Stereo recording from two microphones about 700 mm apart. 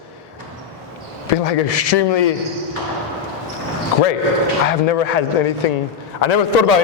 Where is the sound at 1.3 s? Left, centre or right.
Left.